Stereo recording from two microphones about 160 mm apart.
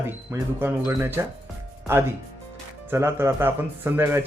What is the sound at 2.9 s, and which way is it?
Speech, 15° right (ahead or behind).